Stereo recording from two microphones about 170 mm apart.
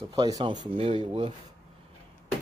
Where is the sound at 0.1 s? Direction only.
25° right (ahead or behind).